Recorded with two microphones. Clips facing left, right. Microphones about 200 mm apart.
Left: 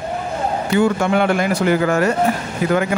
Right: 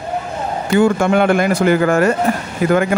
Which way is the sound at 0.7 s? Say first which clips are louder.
Right 3 dB; 50° right (ahead or behind).